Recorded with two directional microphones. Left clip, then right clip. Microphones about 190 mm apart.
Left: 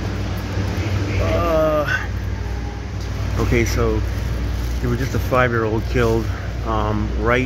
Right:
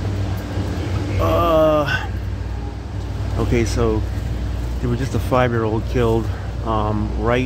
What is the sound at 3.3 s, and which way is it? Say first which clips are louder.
Speech: even; 15° right (ahead or behind).